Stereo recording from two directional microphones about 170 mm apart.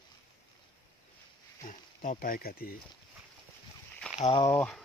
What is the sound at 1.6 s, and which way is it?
Speech, 55° left (ahead or behind).